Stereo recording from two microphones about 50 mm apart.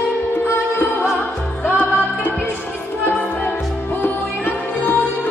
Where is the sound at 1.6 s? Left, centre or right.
Left.